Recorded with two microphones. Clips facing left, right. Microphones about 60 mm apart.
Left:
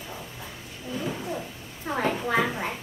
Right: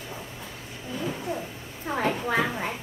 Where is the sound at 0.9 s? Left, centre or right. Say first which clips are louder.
Even; centre.